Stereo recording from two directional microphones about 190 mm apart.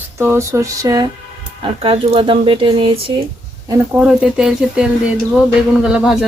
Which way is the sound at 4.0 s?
5° right (ahead or behind).